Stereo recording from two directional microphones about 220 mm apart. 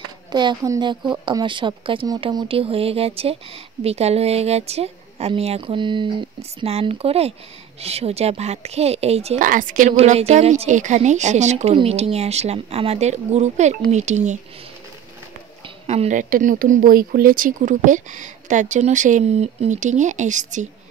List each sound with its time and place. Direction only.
0.3 s speech: 20° right (ahead or behind)
15.9 s speech: 30° right (ahead or behind)